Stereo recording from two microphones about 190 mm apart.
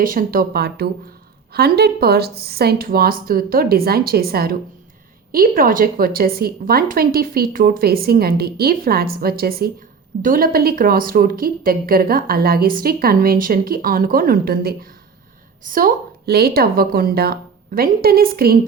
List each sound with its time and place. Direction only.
0.0 s a woman's voice: 45° right (ahead or behind)